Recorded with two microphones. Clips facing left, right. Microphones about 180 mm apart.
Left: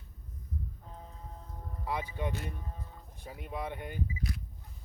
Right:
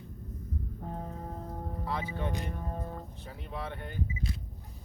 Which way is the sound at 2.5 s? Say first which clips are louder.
Right 8 dB; 55° right (ahead or behind).